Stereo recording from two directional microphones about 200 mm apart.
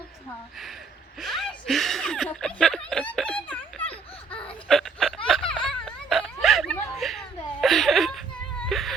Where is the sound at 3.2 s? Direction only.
5° left (ahead or behind).